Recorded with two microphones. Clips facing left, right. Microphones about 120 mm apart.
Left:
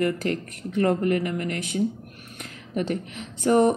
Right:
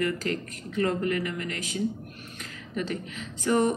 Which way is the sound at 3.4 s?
60° left (ahead or behind).